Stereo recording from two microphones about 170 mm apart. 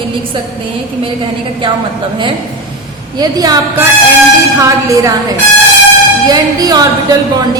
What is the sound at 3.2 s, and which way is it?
Speech, 20° right (ahead or behind).